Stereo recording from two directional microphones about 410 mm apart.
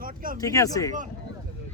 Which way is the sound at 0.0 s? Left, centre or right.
Centre.